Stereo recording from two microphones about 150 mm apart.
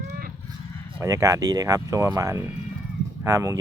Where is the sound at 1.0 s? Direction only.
20° right (ahead or behind).